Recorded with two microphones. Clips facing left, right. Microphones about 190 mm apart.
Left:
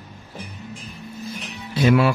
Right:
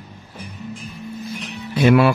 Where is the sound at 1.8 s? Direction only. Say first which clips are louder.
Right 3 dB; 65° right (ahead or behind).